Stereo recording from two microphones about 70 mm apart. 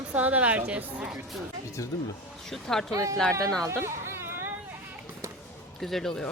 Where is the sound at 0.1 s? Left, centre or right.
Right.